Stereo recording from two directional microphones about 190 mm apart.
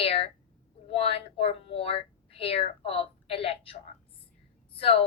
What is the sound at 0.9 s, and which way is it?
A woman's voice, 30° left (ahead or behind).